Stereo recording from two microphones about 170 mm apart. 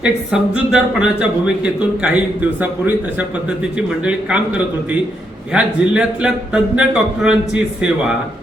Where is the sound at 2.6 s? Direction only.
10° right (ahead or behind).